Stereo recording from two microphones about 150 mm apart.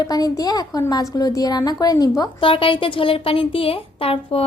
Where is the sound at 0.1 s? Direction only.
25° left (ahead or behind).